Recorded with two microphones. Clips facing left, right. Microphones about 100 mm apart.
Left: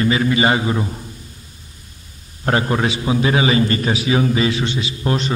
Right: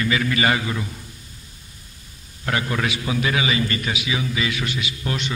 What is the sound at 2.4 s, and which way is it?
A man's voice, 35° left (ahead or behind).